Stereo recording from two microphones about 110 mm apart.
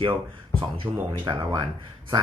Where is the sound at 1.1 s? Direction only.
50° right (ahead or behind).